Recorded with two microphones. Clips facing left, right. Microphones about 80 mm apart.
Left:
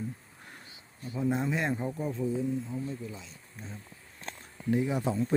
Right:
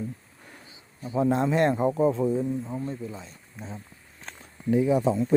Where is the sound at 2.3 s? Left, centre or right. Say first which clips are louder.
Right 4 dB; right.